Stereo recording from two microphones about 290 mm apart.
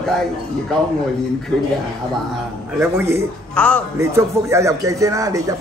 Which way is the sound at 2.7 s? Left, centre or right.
Centre.